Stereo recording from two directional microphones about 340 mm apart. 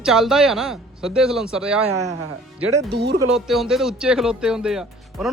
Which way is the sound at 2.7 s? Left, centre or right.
Right.